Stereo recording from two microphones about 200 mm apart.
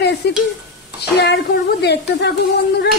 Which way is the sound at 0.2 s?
55° left (ahead or behind).